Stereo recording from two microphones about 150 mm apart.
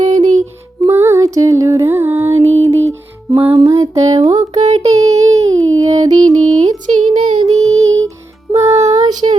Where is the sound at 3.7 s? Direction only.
20° right (ahead or behind).